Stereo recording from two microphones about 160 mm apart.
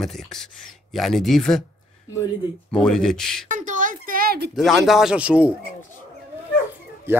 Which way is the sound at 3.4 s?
50° right (ahead or behind).